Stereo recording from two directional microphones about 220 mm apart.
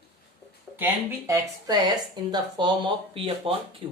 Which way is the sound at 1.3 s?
15° right (ahead or behind).